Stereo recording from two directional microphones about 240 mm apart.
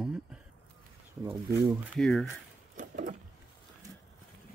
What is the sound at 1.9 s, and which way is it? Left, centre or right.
Speech, centre.